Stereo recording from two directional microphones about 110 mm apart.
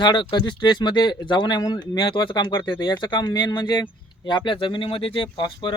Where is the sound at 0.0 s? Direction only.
45° left (ahead or behind).